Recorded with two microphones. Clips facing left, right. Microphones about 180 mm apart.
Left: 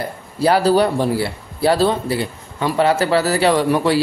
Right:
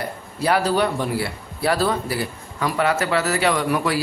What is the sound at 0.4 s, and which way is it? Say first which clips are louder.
Speech: left 5 dB; 35° left (ahead or behind).